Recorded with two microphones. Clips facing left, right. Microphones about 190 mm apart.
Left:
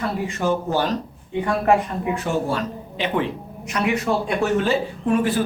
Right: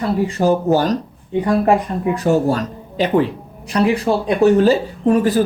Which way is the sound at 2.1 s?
40° right (ahead or behind).